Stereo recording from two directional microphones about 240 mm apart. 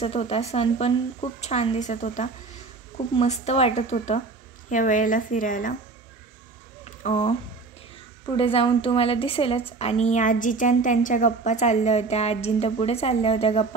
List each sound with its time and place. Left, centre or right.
0.0 s a woman's voice: left
6.8 s a sound: left
8.4 s a woman's voice: left